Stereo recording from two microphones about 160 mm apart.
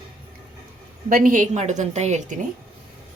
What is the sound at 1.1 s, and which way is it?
A woman's voice, 60° right (ahead or behind).